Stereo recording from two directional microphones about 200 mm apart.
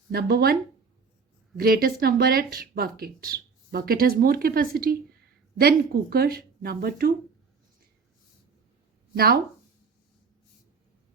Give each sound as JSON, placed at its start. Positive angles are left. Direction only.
{"t": 0.1, "sound": "speech", "side_deg": -50}
{"t": 1.5, "sound": "speech", "side_deg": -50}
{"t": 9.1, "sound": "speech", "side_deg": -50}